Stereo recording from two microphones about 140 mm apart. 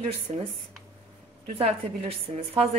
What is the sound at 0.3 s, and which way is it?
Speech, 40° right (ahead or behind).